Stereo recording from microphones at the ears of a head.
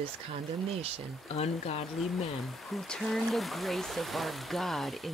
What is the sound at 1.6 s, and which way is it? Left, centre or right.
Speech, left.